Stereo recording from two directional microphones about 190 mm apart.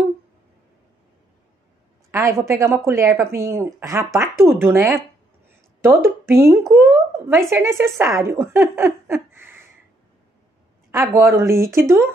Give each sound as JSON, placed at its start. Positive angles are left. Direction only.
{"t": 2.0, "sound": "speech", "side_deg": -15}
{"t": 10.9, "sound": "speech", "side_deg": -15}